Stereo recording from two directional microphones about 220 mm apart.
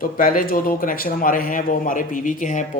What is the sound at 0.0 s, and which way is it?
Speech, 40° left (ahead or behind).